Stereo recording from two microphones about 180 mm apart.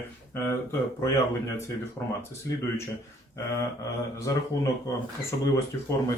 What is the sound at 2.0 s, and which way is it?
Speech, 20° left (ahead or behind).